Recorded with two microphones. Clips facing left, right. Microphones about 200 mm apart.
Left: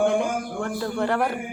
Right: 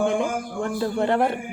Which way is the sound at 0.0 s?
20° right (ahead or behind).